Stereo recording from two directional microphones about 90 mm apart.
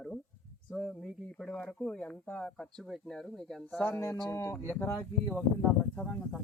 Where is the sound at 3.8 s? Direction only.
30° left (ahead or behind).